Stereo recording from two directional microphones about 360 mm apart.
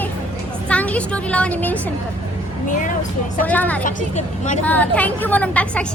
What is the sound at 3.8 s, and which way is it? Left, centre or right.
Speech, left.